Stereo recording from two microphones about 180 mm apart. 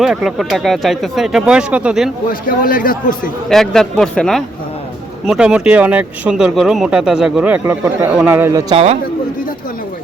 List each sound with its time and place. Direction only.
0.0 s speech: centre (ahead or behind)
2.5 s a man's voice: 50° left (ahead or behind)
3.5 s speech: centre (ahead or behind); by 8.6 s 15° right (ahead or behind)
8.7 s a man's voice: 35° right (ahead or behind)